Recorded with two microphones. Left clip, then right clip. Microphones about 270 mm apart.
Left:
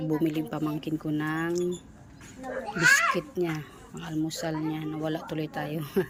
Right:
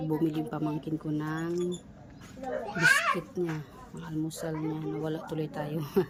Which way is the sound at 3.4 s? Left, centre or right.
Centre.